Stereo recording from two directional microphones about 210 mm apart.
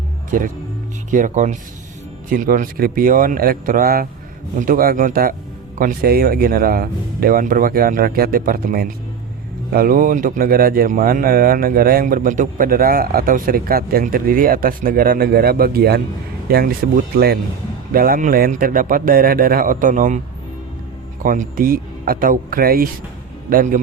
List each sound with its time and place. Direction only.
0.3 s a man's voice: 40° right (ahead or behind)
21.2 s a man's voice: 40° right (ahead or behind)